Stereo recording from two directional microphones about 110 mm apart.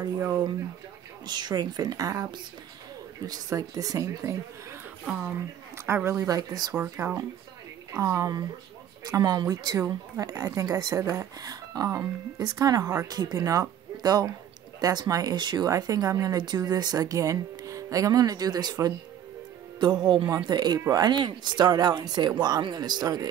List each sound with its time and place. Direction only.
1.2 s speech: 40° right (ahead or behind)
5.0 s speech: 5° right (ahead or behind)
5.9 s speech: 20° right (ahead or behind)
6.2 s speech: 35° right (ahead or behind)
6.7 s speech: 20° right (ahead or behind)
7.9 s speech: 30° right (ahead or behind)
9.8 s speech: 25° right (ahead or behind)